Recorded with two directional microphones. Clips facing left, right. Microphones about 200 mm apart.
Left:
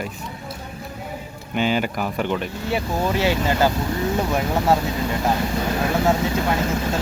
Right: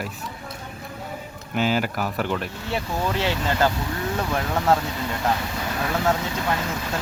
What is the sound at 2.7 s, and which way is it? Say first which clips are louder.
Speech: left 3 dB; 10° left (ahead or behind).